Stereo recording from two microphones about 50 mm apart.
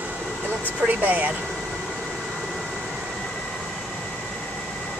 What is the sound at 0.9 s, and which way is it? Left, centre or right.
Speech, right.